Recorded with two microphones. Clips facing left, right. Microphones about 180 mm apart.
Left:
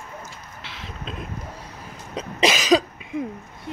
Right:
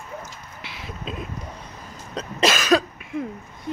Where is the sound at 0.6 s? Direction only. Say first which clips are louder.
Right 2 dB; 10° right (ahead or behind).